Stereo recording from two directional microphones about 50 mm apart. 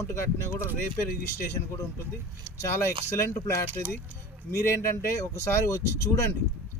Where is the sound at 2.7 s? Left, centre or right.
Left.